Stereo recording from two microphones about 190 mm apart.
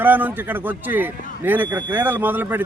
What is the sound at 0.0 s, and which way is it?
Speech, 10° right (ahead or behind).